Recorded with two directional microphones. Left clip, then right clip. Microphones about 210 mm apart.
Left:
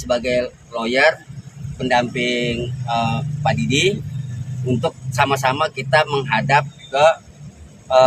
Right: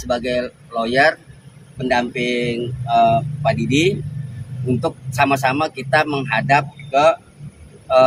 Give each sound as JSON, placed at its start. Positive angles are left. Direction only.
{"t": 0.0, "sound": "a man's voice", "side_deg": 20}